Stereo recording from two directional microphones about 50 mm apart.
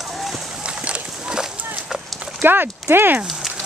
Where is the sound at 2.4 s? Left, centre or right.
Right.